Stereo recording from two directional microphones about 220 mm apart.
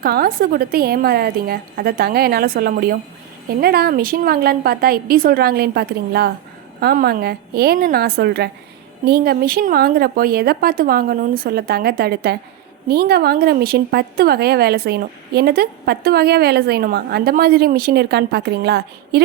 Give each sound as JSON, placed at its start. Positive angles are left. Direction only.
{"t": 0.0, "sound": "a woman's voice", "side_deg": -45}